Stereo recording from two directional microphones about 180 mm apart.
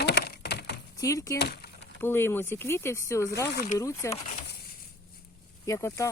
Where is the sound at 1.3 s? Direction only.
65° left (ahead or behind).